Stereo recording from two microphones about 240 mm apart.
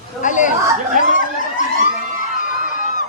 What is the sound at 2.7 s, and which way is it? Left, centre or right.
Fowl, left.